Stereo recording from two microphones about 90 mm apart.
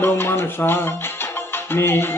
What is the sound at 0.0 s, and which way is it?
Music, 25° left (ahead or behind).